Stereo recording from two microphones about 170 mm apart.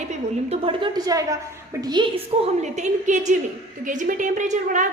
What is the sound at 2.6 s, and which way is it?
A woman's voice, 45° right (ahead or behind).